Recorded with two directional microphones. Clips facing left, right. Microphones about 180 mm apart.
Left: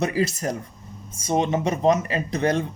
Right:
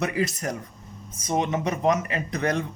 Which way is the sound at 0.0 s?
30° left (ahead or behind).